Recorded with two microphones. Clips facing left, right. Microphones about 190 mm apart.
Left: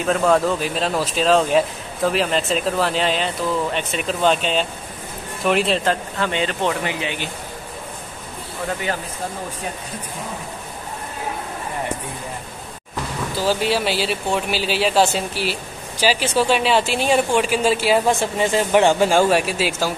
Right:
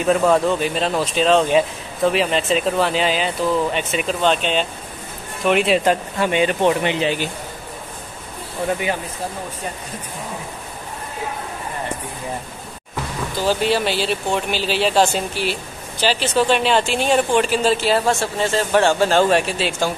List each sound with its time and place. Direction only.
0.0 s speech: centre (ahead or behind)
5.9 s speech: 15° right (ahead or behind)
13.5 s speech: 5° left (ahead or behind)